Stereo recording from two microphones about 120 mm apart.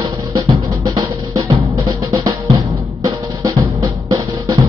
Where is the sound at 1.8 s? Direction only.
30° right (ahead or behind).